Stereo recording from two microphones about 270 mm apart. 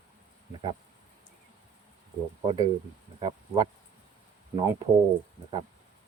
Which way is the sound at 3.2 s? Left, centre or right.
Centre.